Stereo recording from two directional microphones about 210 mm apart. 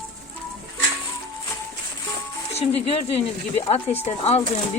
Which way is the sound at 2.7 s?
30° left (ahead or behind).